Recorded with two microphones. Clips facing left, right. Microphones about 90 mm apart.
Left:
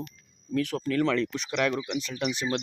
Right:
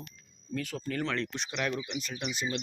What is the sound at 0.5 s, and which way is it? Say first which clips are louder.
Speech: left 8 dB; 85° left.